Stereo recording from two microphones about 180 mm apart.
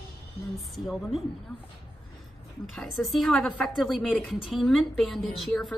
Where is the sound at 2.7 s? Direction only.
Centre (ahead or behind).